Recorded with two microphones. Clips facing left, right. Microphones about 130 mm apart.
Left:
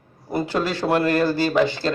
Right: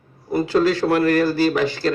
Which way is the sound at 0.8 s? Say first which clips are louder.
Right 2 dB; 25° left (ahead or behind).